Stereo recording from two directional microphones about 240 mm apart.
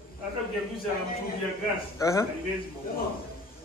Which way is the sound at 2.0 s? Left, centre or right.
Centre.